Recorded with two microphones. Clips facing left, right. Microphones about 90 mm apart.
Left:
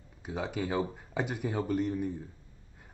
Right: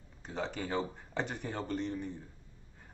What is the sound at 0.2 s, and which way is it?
Speech, 5° left (ahead or behind).